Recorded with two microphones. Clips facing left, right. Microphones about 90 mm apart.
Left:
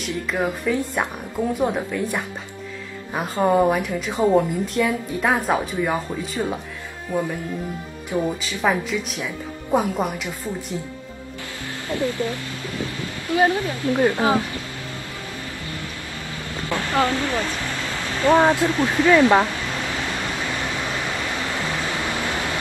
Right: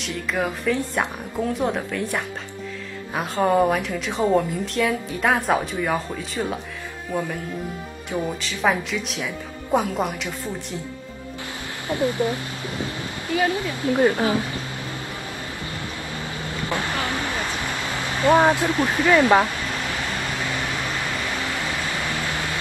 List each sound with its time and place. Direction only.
0.3 s a woman's voice: 5° left (ahead or behind)
8.1 s speech: centre (ahead or behind)
11.9 s speech: 20° right (ahead or behind)
13.3 s speech: 25° left (ahead or behind)
13.8 s speech: 20° right (ahead or behind)
16.6 s speech: 20° right (ahead or behind)